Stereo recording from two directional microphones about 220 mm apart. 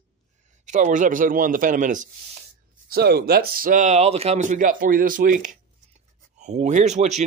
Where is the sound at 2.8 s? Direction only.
45° right (ahead or behind).